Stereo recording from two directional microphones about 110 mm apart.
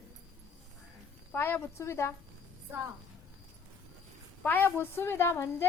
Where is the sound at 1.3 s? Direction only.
20° left (ahead or behind).